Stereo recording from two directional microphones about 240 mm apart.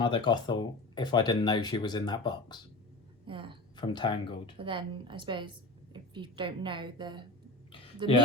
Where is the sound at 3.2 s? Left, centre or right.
Right.